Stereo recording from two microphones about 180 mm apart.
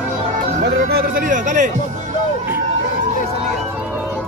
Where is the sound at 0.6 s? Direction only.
50° right (ahead or behind).